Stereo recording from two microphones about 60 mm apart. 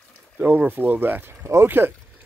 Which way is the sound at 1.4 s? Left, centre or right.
Right.